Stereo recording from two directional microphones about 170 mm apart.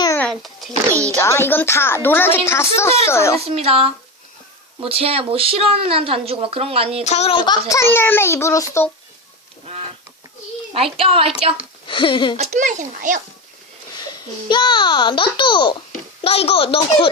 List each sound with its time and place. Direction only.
0.2 s a sound: 5° left (ahead or behind)
0.9 s a sound: 20° right (ahead or behind)
1.2 s a woman's voice: 15° left (ahead or behind)
3.5 s speech: 35° right (ahead or behind)
7.0 s a woman's voice: 40° left (ahead or behind); by 8.9 s 15° left (ahead or behind)
10.8 s speech: 35° right (ahead or behind)
11.9 s a child's voice: 30° left (ahead or behind)
12.4 s a child's voice: 45° right (ahead or behind)
14.5 s a child's voice: 25° left (ahead or behind)